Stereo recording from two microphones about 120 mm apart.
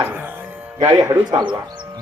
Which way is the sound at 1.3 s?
40° right (ahead or behind).